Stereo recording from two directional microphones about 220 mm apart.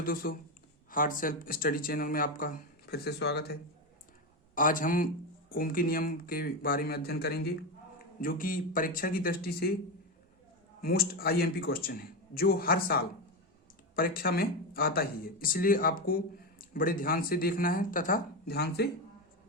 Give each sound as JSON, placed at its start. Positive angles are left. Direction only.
{"t": 0.0, "sound": "speech", "side_deg": 40}
{"t": 4.5, "sound": "speech", "side_deg": 40}
{"t": 10.8, "sound": "a man's voice", "side_deg": 45}